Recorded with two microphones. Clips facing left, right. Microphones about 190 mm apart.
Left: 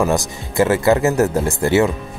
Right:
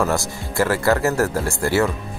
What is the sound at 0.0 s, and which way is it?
Speech, 20° left (ahead or behind).